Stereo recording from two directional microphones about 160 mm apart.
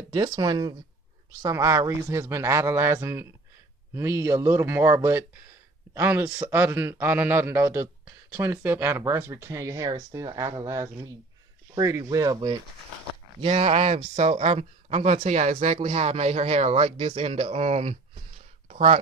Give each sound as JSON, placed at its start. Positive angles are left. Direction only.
{"t": 0.1, "sound": "a man's voice", "side_deg": -30}
{"t": 13.4, "sound": "speech", "side_deg": -40}
{"t": 18.7, "sound": "a sound", "side_deg": -40}